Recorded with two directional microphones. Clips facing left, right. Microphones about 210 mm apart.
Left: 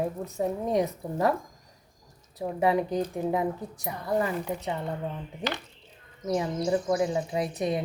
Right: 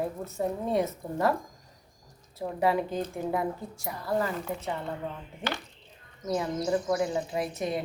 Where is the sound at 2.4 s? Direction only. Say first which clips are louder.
Left 2 dB; 20° left (ahead or behind).